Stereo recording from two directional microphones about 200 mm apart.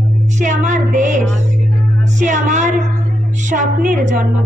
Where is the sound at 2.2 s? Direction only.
35° right (ahead or behind).